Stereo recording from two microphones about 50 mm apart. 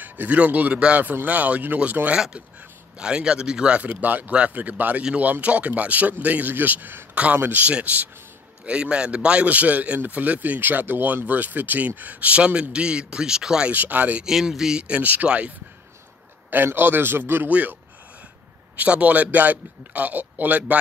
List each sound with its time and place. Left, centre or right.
0.0 s a man's voice: right
3.0 s a man's voice: centre
8.6 s a man's voice: right
13.7 s a man's voice: right
14.2 s speech: centre
14.8 s a man's voice: right
16.4 s a man's voice: right
17.5 s a man's voice: right
18.8 s a man's voice: right